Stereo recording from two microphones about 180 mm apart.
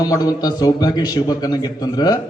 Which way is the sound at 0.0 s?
20° left (ahead or behind).